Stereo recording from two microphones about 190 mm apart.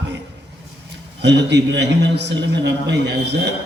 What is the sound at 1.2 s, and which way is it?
A man's voice, 65° right (ahead or behind).